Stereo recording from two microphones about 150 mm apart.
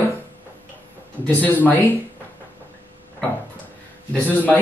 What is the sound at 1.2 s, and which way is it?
Speech, 10° left (ahead or behind).